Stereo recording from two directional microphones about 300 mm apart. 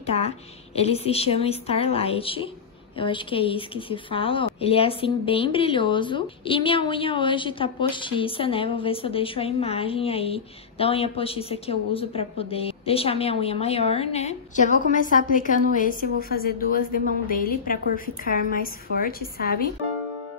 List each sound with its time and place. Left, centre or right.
0.0 s a woman's voice: left